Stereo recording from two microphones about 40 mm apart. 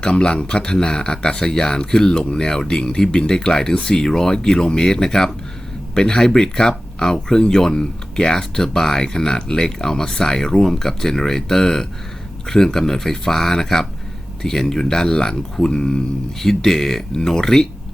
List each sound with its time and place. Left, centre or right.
0.0 s speech: left
16.4 s speech: centre